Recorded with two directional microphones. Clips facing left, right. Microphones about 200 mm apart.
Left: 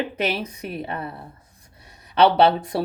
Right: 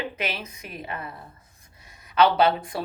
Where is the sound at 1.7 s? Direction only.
35° left (ahead or behind).